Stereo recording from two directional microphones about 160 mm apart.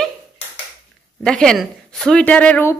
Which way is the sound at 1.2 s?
5° left (ahead or behind).